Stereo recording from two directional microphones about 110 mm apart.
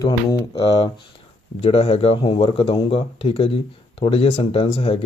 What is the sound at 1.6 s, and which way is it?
Speech, 65° left (ahead or behind).